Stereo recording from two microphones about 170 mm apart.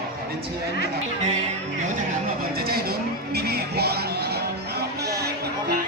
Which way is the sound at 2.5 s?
65° right (ahead or behind).